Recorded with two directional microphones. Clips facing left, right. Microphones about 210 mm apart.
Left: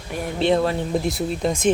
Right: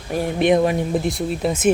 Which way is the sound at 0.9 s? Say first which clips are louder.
Right 1 dB; centre (ahead or behind).